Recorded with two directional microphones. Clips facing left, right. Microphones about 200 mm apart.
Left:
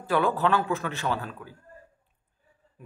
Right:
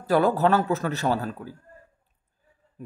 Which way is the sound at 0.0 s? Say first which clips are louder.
Right 4 dB; 40° right (ahead or behind).